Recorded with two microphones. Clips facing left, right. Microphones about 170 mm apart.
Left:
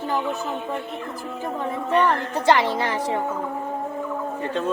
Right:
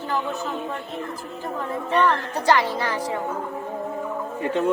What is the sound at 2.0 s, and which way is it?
A woman's voice, 25° left (ahead or behind).